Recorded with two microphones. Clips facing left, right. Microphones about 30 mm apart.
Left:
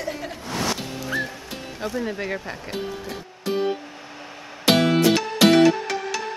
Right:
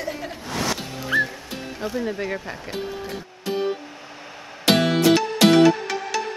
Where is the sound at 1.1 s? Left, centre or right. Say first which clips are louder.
Right 6 dB; right.